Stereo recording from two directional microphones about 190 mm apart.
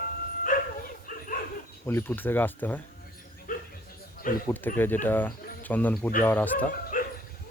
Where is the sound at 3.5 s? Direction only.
45° left (ahead or behind).